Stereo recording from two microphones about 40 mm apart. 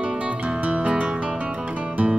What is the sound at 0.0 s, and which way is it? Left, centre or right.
Music, right.